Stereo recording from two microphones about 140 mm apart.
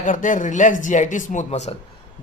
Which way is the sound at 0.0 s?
70° left (ahead or behind).